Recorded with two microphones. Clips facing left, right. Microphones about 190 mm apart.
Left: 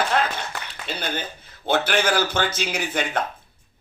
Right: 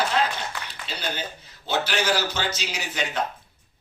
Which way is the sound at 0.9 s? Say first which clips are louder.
Left 3 dB; 55° left (ahead or behind).